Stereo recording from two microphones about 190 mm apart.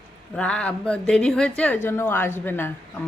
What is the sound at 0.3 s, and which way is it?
Speech, 5° left (ahead or behind).